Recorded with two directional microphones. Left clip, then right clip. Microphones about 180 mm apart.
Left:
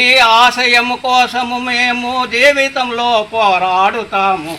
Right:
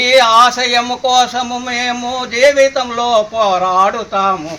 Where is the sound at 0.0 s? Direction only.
25° right (ahead or behind).